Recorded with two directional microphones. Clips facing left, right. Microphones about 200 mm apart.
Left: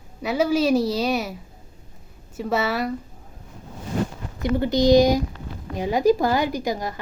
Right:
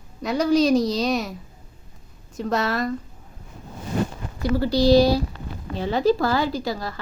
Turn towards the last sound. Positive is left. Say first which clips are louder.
# left 1 dB
turn(degrees=20)  # may be behind; listen again after turning